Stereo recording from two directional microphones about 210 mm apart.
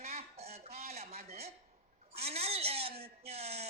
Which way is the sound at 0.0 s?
30° right (ahead or behind).